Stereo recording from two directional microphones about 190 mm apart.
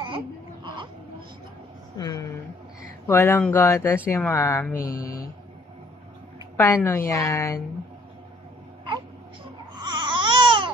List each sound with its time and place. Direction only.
2.0 s a woman's voice: 20° left (ahead or behind)
4.7 s mantra: 50° left (ahead or behind)
6.5 s a woman's voice: 15° left (ahead or behind)
9.8 s babbling: 25° right (ahead or behind)